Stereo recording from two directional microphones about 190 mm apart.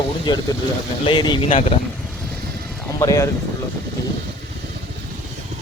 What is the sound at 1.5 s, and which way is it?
Speech, 35° left (ahead or behind).